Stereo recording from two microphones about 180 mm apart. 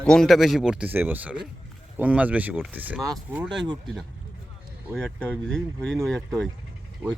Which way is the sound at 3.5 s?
25° right (ahead or behind).